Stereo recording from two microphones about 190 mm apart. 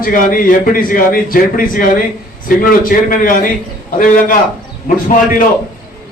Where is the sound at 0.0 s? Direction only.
45° left (ahead or behind).